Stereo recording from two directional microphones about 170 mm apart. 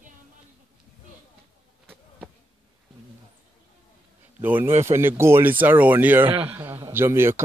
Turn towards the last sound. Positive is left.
turn(degrees=-15)  # may be behind; listen again after turning